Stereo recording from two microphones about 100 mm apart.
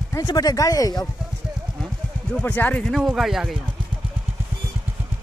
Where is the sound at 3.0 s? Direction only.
5° right (ahead or behind).